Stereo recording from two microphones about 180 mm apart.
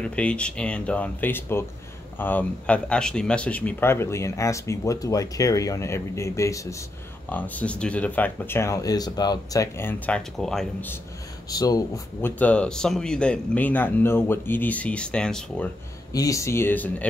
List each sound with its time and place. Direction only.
0.0 s speech: 5° left (ahead or behind)
11.5 s speech: 20° left (ahead or behind); by 15.7 s 5° left (ahead or behind)
16.1 s speech: 20° left (ahead or behind)